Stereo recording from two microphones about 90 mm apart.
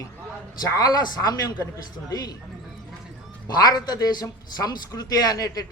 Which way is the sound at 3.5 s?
45° left (ahead or behind).